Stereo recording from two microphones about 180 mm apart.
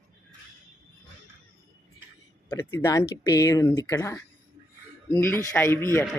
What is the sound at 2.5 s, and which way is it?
Speech, 15° left (ahead or behind).